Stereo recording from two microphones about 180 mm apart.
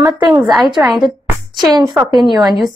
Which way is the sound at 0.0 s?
25° right (ahead or behind).